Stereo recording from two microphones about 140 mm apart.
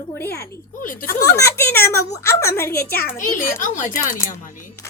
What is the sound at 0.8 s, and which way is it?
Speech, 75° left (ahead or behind).